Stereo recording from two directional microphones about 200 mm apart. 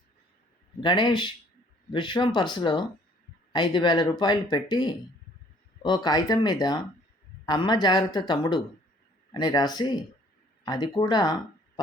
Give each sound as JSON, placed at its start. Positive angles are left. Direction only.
{"t": 0.8, "sound": "speech", "side_deg": 20}